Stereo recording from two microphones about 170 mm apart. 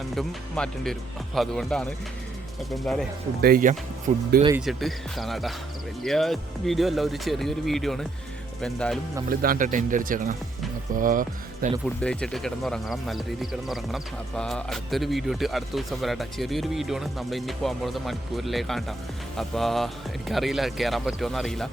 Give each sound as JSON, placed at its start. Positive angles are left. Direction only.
{"t": 0.1, "sound": "speech", "side_deg": 5}
{"t": 3.4, "sound": "speech", "side_deg": -55}
{"t": 4.5, "sound": "speech", "side_deg": 0}
{"t": 9.3, "sound": "speech", "side_deg": -60}
{"t": 11.9, "sound": "speech", "side_deg": 5}